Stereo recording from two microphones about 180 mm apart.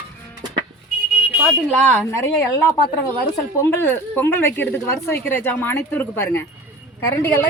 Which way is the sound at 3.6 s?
15° left (ahead or behind).